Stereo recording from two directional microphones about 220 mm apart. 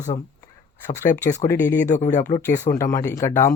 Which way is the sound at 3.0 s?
10° left (ahead or behind).